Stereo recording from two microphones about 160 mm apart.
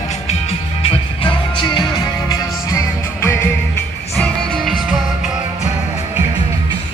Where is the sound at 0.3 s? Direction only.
40° left (ahead or behind); by 3.3 s 20° left (ahead or behind).